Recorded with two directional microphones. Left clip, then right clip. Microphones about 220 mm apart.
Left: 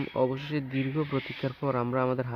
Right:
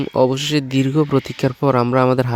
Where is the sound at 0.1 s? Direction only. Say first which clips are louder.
Right 13 dB; 55° right (ahead or behind).